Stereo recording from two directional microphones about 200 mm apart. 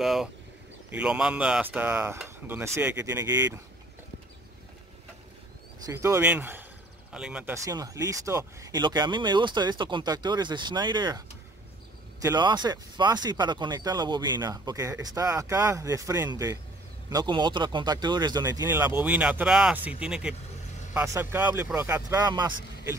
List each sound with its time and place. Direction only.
0.0 s speech: centre (ahead or behind)
5.9 s speech: 15° right (ahead or behind)
7.5 s speech: 15° right (ahead or behind)